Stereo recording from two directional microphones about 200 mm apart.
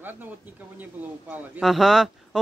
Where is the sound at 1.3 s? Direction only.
5° right (ahead or behind).